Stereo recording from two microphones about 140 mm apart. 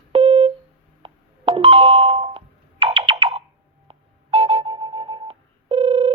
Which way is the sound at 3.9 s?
45° right (ahead or behind).